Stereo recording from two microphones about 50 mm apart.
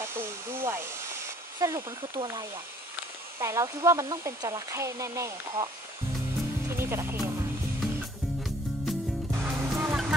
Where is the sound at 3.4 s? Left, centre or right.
Right.